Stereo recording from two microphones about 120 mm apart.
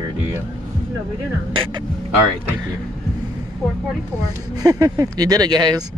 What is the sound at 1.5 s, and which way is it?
Speech, 45° right (ahead or behind).